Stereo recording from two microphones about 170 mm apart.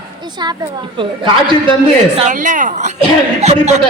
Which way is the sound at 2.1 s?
45° right (ahead or behind).